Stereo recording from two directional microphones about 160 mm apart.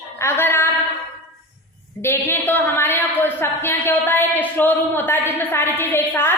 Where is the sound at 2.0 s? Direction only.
15° left (ahead or behind).